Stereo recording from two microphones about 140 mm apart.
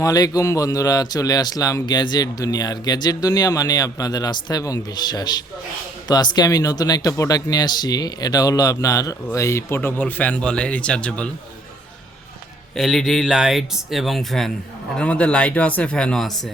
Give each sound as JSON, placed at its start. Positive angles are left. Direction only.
{"t": 0.0, "sound": "speech", "side_deg": 25}
{"t": 12.7, "sound": "speech", "side_deg": 0}